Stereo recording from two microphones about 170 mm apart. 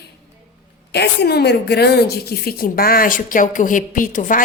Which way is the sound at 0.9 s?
70° left (ahead or behind).